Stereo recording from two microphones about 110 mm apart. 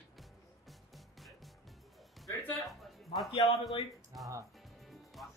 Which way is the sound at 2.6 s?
Centre (ahead or behind).